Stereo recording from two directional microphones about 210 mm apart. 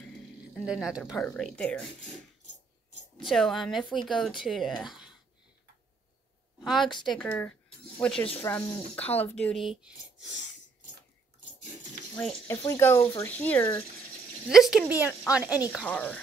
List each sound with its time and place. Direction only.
0.7 s speech: 5° right (ahead or behind)
3.3 s speech: centre (ahead or behind)
6.6 s a woman's voice: centre (ahead or behind)
6.9 s speech: 20° left (ahead or behind)
7.2 s speech: 5° left (ahead or behind)
12.4 s speech: 15° left (ahead or behind)
14.5 s speech: centre (ahead or behind)
15.8 s speech: 5° left (ahead or behind)